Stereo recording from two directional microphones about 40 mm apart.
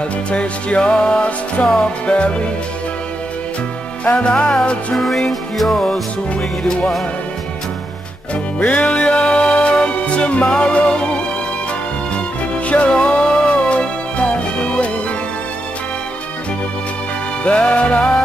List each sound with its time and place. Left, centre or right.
0.3 s music: left
1.6 s music: left
4.0 s music: left
4.9 s music: centre
8.5 s music: left
12.6 s music: left
17.4 s music: left